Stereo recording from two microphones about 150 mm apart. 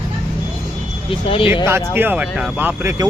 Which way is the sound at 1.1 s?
35° left (ahead or behind).